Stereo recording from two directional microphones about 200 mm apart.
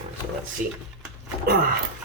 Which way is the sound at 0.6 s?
40° right (ahead or behind).